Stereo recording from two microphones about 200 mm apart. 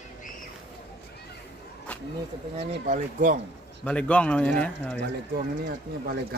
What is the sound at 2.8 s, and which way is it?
Speech, 40° right (ahead or behind).